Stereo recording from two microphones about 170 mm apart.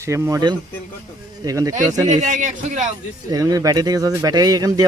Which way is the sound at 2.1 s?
45° right (ahead or behind).